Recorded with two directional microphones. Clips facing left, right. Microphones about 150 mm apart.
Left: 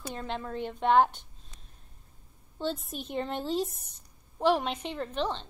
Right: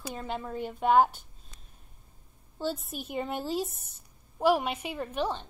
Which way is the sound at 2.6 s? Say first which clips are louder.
Even; 5° right (ahead or behind).